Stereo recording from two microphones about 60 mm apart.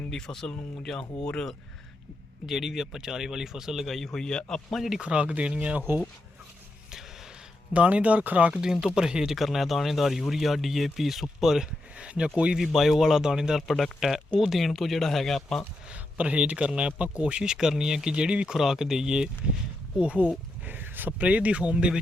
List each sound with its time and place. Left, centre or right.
0.1 s a man's voice: centre
2.5 s a man's voice: centre
3.9 s a man's voice: centre
4.9 s speech: centre
7.7 s speech: right
8.6 s speech: centre
11.9 s speech: centre
12.5 s speech: centre
15.9 s a man's voice: centre
20.7 s speech: right